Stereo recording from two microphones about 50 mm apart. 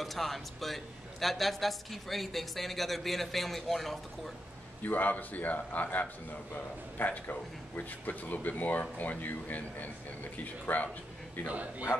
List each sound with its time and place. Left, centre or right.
0.0 s a man's voice: centre
4.8 s a man's voice: left
11.4 s a man's voice: right